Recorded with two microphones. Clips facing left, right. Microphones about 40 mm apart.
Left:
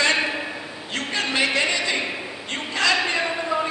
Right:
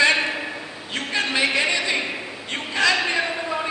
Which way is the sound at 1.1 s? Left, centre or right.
Centre.